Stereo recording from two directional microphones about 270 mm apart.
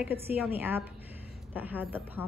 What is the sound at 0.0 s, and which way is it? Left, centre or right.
A woman's voice, centre.